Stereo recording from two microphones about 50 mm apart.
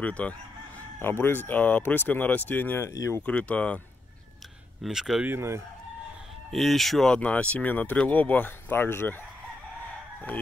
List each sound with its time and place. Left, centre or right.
0.0 s speech: left
0.9 s speech: left
2.8 s speech: left
3.3 s speech: left
4.8 s speech: centre
6.5 s speech: centre
7.2 s speech: left